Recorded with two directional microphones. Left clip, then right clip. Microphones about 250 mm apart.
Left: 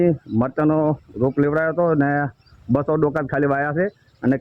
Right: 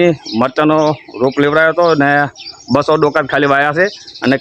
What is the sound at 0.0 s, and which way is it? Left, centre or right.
Speech, centre.